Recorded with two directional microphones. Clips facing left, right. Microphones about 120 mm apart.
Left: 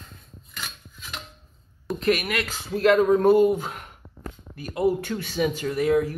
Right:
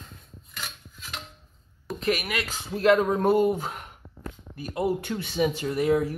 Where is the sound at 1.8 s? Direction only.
5° right (ahead or behind).